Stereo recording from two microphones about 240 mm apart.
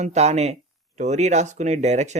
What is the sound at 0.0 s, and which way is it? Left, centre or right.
Speech, right.